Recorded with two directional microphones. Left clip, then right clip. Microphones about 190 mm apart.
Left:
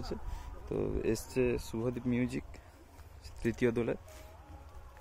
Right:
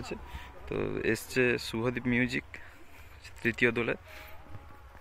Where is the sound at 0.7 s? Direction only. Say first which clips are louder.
Right 3 dB; 10° left (ahead or behind).